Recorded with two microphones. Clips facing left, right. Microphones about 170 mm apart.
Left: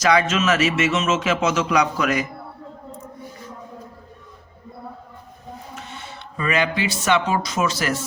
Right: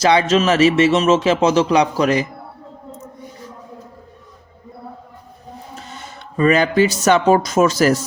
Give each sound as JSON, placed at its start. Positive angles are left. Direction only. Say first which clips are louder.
{"t": 0.0, "sound": "speech", "louder": "right 4 dB", "side_deg": -30}
{"t": 5.7, "sound": "speech", "louder": "right 1 dB", "side_deg": -40}